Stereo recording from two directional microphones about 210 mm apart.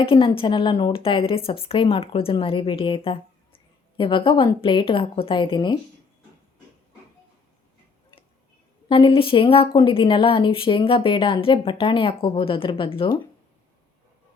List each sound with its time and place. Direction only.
0.0 s a woman's voice: 25° left (ahead or behind)
8.9 s a woman's voice: 25° left (ahead or behind)